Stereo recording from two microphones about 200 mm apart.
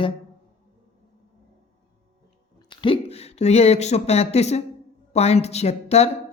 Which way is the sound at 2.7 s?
25° left (ahead or behind).